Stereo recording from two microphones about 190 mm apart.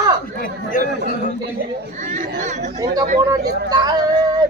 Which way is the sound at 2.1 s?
40° right (ahead or behind).